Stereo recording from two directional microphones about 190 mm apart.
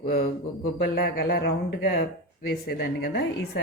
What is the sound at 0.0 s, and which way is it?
A woman's voice, 50° left (ahead or behind).